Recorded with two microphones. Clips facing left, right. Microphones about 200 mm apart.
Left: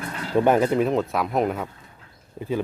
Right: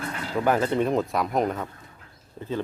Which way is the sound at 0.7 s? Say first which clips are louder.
Left 2 dB; centre (ahead or behind).